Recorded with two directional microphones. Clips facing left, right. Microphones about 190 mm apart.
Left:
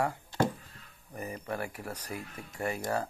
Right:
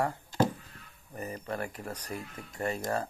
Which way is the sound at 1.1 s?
10° left (ahead or behind).